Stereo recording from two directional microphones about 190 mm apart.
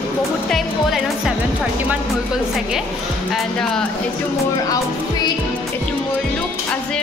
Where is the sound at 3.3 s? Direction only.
5° left (ahead or behind).